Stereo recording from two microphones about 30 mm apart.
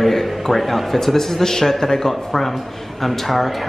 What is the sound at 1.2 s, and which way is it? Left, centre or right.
A man's voice, centre.